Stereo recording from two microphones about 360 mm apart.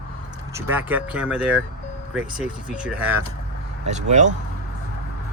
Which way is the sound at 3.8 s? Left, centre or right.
Centre.